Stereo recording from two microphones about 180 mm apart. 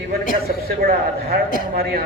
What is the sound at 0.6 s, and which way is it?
Speech, 60° right (ahead or behind).